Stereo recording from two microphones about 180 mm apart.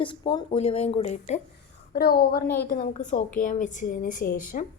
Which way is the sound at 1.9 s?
60° left (ahead or behind).